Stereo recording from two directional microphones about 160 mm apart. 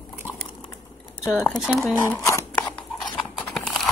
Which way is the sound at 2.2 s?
15° left (ahead or behind).